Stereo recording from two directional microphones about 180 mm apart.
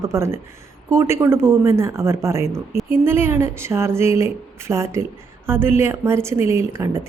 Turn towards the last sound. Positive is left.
turn(degrees=-15)  # may be behind; listen again after turning